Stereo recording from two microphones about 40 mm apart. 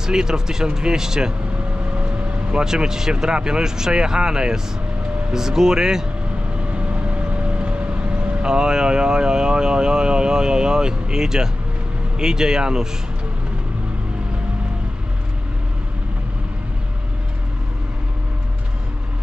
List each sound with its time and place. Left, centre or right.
0.0 s speech: centre
2.5 s speech: centre
6.7 s vehicle: right
8.5 s speech: centre